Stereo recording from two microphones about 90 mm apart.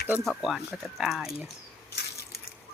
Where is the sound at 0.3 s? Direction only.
Centre (ahead or behind).